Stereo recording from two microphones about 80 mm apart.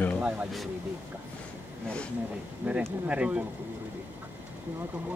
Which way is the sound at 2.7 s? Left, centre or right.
Centre.